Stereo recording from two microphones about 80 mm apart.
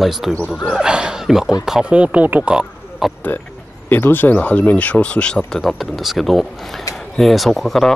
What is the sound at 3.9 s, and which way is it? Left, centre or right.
Speech, left.